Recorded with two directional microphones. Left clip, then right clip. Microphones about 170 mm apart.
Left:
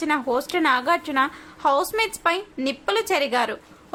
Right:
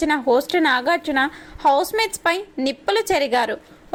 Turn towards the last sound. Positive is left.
turn(degrees=-20)  # may be behind; listen again after turning